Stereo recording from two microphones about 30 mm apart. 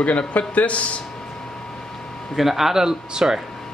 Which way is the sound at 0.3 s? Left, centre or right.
Left.